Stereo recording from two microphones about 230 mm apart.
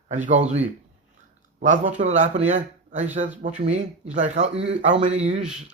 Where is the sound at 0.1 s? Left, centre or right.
Right.